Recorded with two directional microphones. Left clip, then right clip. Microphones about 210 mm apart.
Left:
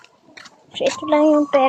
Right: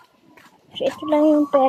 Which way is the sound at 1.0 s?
Centre (ahead or behind).